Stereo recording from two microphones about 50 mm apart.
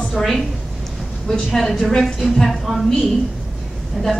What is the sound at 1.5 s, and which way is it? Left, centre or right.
A man's voice, centre.